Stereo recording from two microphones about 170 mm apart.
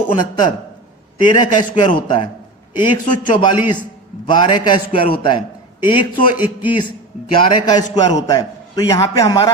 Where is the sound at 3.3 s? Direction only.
25° left (ahead or behind).